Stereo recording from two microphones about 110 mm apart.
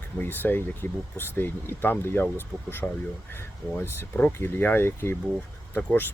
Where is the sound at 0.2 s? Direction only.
15° left (ahead or behind).